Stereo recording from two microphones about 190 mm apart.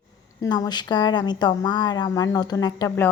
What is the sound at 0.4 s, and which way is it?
A woman's voice, 20° left (ahead or behind).